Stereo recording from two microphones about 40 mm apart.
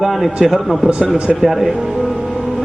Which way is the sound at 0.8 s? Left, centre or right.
Right.